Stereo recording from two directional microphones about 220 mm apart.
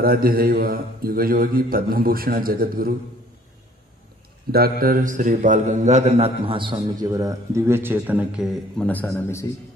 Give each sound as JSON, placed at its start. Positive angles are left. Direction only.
{"t": 0.0, "sound": "a man's voice", "side_deg": -40}
{"t": 4.5, "sound": "a man's voice", "side_deg": -45}